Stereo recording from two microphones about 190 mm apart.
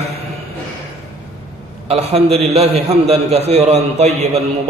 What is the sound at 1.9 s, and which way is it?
A man's voice, 35° right (ahead or behind).